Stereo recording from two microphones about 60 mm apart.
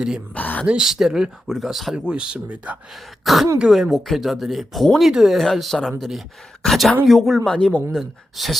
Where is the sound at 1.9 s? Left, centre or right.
Centre.